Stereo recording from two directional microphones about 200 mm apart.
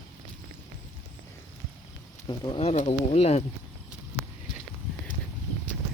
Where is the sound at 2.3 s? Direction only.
25° left (ahead or behind).